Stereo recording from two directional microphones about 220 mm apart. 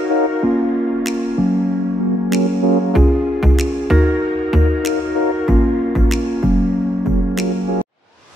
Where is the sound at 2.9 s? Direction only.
Centre (ahead or behind).